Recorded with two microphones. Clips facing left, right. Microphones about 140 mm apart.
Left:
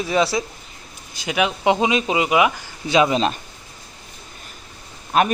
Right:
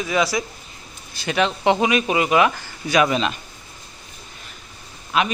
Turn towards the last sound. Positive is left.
turn(degrees=45)  # may be behind; listen again after turning